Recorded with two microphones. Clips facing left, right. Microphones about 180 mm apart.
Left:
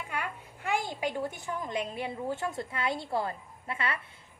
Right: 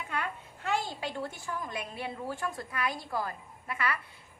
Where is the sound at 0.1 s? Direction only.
10° left (ahead or behind).